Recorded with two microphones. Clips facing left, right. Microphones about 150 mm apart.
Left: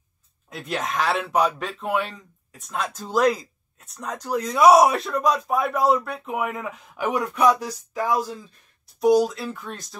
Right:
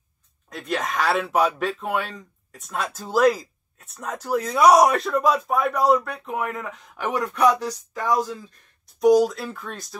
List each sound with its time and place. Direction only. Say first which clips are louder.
0.5 s speech: right 1 dB; centre (ahead or behind)